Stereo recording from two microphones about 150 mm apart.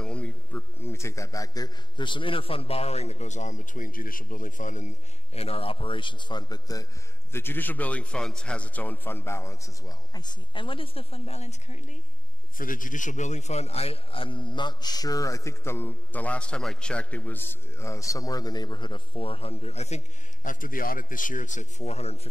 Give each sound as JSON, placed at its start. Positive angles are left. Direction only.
{"t": 0.0, "sound": "a man's voice", "side_deg": 10}
{"t": 7.3, "sound": "a man's voice", "side_deg": 15}
{"t": 12.5, "sound": "a man's voice", "side_deg": 65}
{"t": 20.4, "sound": "a man's voice", "side_deg": 65}